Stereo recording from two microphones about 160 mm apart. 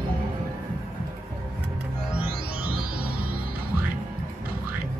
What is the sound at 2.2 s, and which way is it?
Music, 65° right (ahead or behind).